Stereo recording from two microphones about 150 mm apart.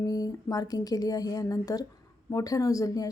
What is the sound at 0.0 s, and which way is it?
A woman's voice, 25° left (ahead or behind).